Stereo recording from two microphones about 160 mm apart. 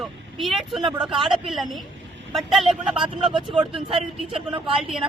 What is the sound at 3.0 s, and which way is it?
Speech, 35° right (ahead or behind).